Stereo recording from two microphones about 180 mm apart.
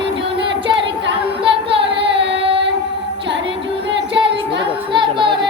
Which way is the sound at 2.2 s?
80° right.